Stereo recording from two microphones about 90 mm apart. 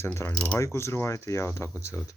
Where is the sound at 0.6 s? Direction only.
30° left (ahead or behind).